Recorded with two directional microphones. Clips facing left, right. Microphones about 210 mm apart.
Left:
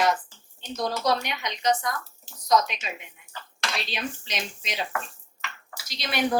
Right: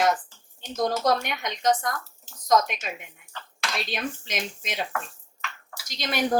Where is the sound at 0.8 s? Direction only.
50° right (ahead or behind).